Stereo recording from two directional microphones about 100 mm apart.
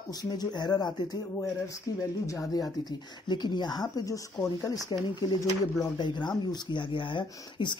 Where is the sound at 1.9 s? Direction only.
35° left (ahead or behind).